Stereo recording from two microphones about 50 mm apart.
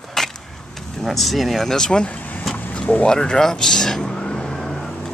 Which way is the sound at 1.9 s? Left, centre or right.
Centre.